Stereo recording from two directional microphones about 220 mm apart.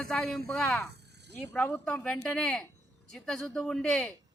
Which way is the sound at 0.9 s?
50° right (ahead or behind).